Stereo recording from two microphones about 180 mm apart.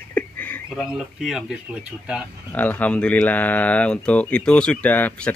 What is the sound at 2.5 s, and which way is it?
Speech, 10° left (ahead or behind).